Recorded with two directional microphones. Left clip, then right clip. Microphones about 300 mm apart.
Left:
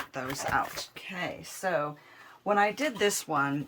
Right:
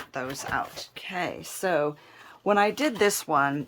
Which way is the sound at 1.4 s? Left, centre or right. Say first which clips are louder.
Right 4 dB; right.